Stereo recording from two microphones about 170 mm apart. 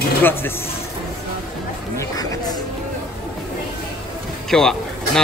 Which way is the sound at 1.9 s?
20° left (ahead or behind).